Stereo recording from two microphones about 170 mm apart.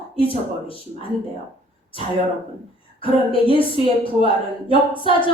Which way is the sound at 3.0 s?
30° left (ahead or behind).